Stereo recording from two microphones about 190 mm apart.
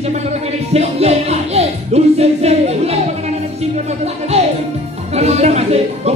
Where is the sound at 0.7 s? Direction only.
35° right (ahead or behind).